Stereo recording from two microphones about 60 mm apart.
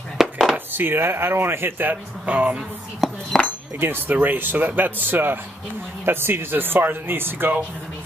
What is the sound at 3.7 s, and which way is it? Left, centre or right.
Speech, right.